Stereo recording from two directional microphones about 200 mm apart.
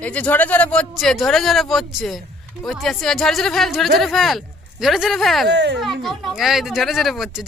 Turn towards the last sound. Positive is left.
turn(degrees=0)  # may be behind; listen again after turning